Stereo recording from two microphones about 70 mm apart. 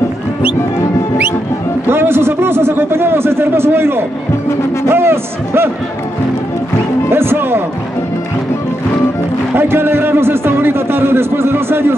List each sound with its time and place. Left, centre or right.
1.9 s a man's voice: right
7.1 s a man's voice: right
9.6 s a man's voice: right